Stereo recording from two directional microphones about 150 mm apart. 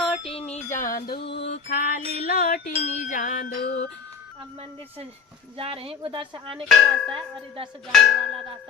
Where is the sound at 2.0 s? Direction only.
45° right (ahead or behind).